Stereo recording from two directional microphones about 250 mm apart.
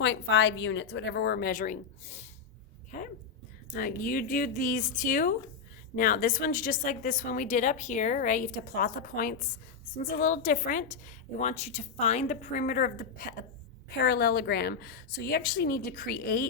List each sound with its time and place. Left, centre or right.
0.0 s speech: left
2.9 s a sound: left
3.7 s a woman's voice: left